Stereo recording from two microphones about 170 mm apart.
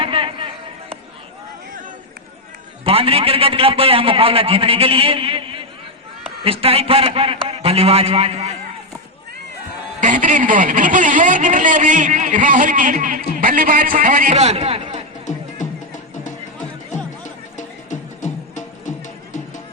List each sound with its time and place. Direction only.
0.0 s chatter: 30° right (ahead or behind)
2.8 s a man's voice: 35° right (ahead or behind)
10.0 s a man's voice: 50° right (ahead or behind)
14.3 s a man's voice: 35° right (ahead or behind)
15.3 s music: 45° left (ahead or behind)